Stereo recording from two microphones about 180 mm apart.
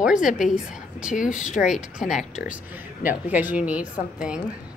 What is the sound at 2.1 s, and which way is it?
A woman's voice, 5° right (ahead or behind).